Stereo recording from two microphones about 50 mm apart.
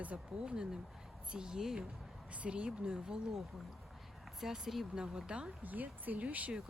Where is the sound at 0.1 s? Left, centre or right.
Right.